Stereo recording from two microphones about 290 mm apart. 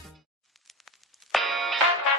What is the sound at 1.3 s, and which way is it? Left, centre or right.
Music, centre.